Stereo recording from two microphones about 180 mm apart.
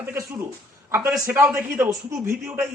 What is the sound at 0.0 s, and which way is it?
Speech, 15° right (ahead or behind).